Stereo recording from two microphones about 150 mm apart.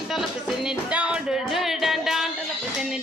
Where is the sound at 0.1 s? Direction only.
Centre (ahead or behind).